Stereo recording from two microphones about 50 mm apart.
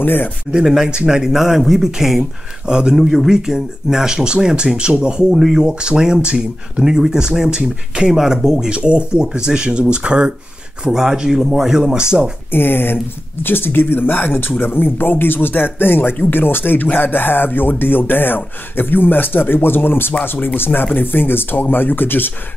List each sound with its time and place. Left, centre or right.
0.0 s speech: left
0.5 s speech: centre
5.3 s speech: centre
5.6 s speech: centre
8.7 s speech: right
12.4 s speech: left